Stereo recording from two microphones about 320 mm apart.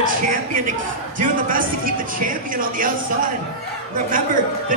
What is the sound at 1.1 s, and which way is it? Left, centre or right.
Speech, right.